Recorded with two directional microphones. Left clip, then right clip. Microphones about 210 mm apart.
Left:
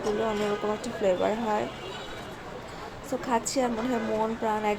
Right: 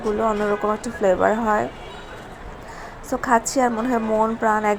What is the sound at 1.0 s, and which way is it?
Speech, 20° right (ahead or behind).